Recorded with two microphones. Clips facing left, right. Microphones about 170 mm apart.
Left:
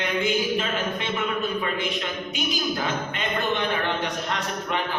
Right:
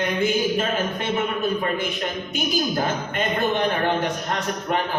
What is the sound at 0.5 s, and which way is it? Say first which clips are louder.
A man's voice: right 3 dB; 45° right (ahead or behind).